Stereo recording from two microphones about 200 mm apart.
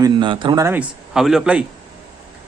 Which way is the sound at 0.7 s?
Centre (ahead or behind).